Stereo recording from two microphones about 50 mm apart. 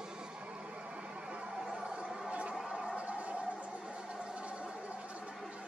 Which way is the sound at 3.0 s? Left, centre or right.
Right.